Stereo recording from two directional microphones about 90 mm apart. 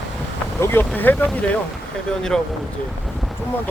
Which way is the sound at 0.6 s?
25° left (ahead or behind).